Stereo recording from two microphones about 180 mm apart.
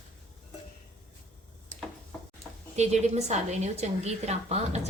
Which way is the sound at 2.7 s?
40° right (ahead or behind).